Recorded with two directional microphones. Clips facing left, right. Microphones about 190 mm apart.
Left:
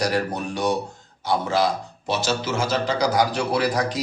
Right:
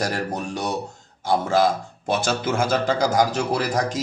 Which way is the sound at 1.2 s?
50° right (ahead or behind).